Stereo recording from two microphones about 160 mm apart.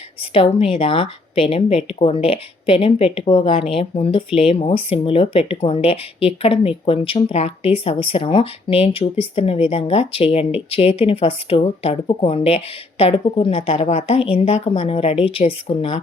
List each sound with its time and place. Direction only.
0.2 s speech: 35° left (ahead or behind)